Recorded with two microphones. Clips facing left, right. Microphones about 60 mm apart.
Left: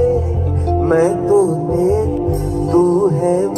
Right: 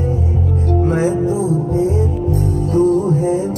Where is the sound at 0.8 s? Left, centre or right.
Left.